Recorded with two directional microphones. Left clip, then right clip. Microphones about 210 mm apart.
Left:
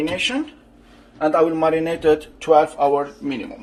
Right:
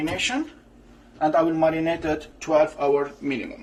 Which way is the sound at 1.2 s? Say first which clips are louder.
Left 3 dB; 25° left (ahead or behind).